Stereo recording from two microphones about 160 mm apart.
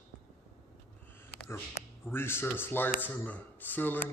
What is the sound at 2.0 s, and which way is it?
Speech, 15° left (ahead or behind).